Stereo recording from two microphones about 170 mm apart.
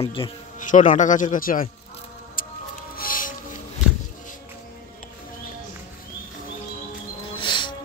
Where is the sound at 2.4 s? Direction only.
55° left (ahead or behind).